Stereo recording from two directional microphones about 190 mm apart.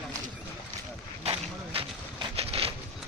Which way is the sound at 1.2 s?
25° right (ahead or behind).